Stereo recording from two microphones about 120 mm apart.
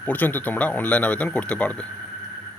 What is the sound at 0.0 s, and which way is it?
Speech, 15° left (ahead or behind).